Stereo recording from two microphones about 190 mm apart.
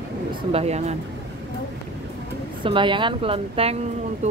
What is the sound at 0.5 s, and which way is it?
Speech, 35° right (ahead or behind).